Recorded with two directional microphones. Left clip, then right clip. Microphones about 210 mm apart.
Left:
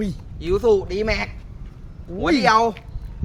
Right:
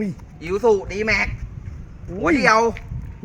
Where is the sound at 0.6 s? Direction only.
65° left (ahead or behind).